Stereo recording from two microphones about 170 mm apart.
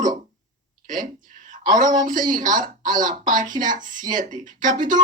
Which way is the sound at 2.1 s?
50° right (ahead or behind).